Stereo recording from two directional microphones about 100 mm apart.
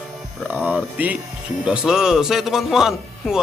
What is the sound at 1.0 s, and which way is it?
Speech, 15° right (ahead or behind).